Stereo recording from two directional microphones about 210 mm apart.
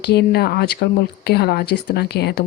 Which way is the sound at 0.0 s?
50° left (ahead or behind).